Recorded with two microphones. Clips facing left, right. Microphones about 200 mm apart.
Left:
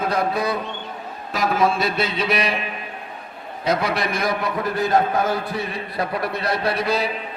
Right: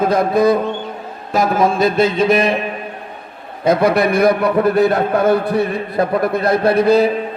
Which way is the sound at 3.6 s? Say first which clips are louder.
Right 9 dB; 55° right (ahead or behind).